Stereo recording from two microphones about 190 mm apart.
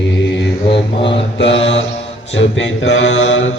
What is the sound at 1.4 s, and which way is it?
Speech, 75° left (ahead or behind).